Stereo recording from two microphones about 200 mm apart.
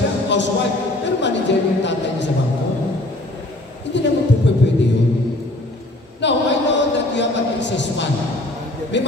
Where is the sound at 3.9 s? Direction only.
65° left (ahead or behind).